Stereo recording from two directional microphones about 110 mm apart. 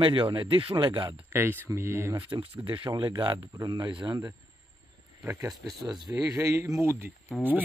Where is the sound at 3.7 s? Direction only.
45° right (ahead or behind).